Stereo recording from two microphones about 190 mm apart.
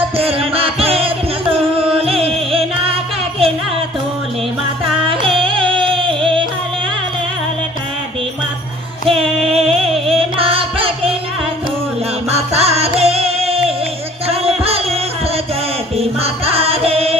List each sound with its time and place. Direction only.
0.2 s music: 30° right (ahead or behind)
5.0 s music: 30° right (ahead or behind)
9.0 s music: 30° right (ahead or behind)
12.3 s music: 35° right (ahead or behind)
16.0 s music: 30° right (ahead or behind)